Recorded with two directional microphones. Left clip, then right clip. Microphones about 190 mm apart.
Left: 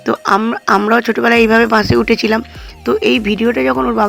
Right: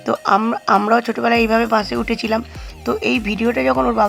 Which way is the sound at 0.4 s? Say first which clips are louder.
Left 3 dB; 15° left (ahead or behind).